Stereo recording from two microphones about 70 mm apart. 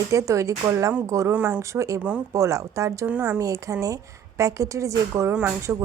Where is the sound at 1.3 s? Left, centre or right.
Centre.